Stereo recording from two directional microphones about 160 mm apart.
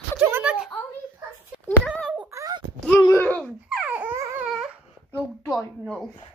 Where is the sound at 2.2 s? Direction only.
20° right (ahead or behind).